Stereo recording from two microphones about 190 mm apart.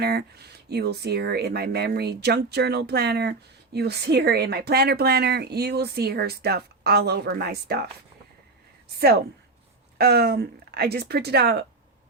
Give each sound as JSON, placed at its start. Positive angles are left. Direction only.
{"t": 0.0, "sound": "speech", "side_deg": -55}
{"t": 9.0, "sound": "speech", "side_deg": -55}